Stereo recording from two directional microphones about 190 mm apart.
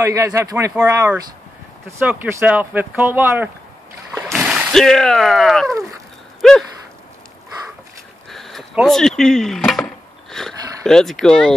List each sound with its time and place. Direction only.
0.0 s speech: 15° right (ahead or behind); by 5.8 s centre (ahead or behind)
6.4 s gasp: centre (ahead or behind)
8.3 s wood: centre (ahead or behind)
10.3 s speech: centre (ahead or behind)